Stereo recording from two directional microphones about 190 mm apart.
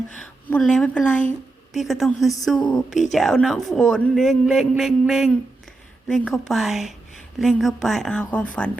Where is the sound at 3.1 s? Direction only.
Centre (ahead or behind).